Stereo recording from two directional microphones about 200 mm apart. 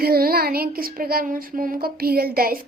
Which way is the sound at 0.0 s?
50° right (ahead or behind).